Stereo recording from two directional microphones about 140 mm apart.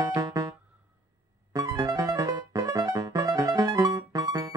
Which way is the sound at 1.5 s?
25° right (ahead or behind).